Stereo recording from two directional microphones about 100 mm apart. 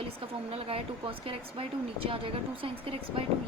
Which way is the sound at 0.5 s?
75° right (ahead or behind).